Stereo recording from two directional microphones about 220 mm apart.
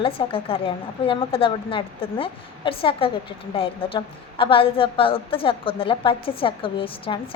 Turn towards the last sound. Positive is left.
turn(degrees=25)  # may be behind; listen again after turning